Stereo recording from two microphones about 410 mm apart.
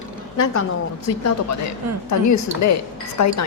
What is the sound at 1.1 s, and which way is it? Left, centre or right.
A woman's voice, left.